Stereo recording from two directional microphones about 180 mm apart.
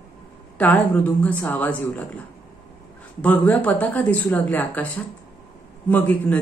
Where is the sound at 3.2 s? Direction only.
5° left (ahead or behind).